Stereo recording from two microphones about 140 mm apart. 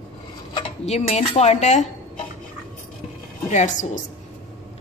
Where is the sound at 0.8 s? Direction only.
50° left (ahead or behind).